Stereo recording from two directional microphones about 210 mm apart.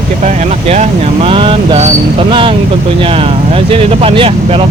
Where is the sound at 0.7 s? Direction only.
30° right (ahead or behind).